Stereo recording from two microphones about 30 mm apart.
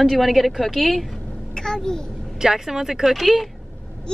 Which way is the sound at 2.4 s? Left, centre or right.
Centre.